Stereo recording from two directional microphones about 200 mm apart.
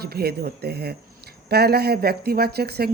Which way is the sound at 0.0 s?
50° right (ahead or behind).